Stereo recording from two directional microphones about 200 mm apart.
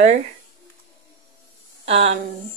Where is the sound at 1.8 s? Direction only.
35° right (ahead or behind).